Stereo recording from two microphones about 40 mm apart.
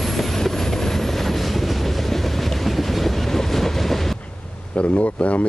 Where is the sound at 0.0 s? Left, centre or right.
Centre.